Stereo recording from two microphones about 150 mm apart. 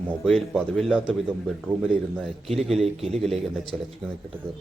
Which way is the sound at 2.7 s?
45° right (ahead or behind).